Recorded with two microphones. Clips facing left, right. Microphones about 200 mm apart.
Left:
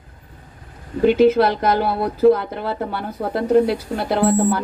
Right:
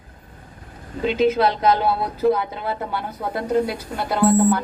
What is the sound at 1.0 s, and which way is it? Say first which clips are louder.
Speech: left 5 dB; 55° left (ahead or behind).